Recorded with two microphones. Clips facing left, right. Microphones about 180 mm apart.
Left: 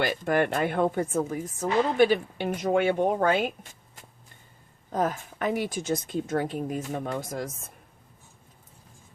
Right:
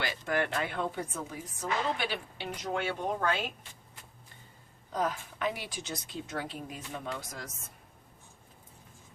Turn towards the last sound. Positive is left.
turn(degrees=50)  # may be behind; listen again after turning